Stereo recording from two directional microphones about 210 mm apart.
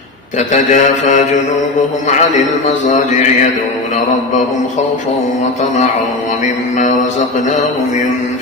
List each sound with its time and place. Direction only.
0.3 s mantra: 35° left (ahead or behind)
2.8 s mantra: 35° left (ahead or behind)
6.4 s mantra: 35° left (ahead or behind)